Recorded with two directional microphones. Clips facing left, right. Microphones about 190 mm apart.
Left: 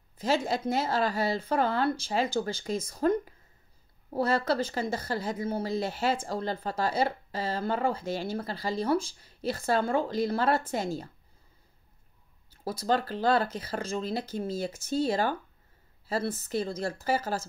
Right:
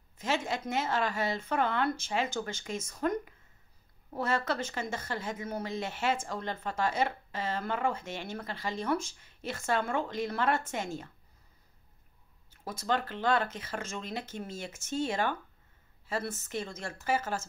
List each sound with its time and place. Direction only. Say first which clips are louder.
0.2 s speech: left 5 dB; 35° left (ahead or behind)
12.4 s speech: left 4 dB; 35° left (ahead or behind)